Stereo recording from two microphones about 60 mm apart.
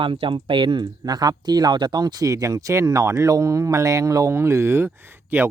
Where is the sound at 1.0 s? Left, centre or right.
Right.